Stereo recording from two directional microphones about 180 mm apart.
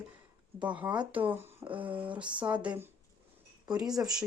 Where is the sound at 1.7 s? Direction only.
10° right (ahead or behind).